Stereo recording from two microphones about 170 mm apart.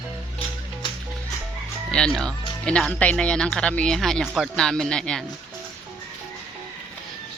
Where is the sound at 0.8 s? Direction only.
25° left (ahead or behind).